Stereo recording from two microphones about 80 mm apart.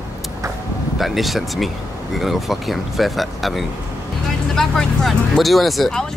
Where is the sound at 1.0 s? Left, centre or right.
Centre.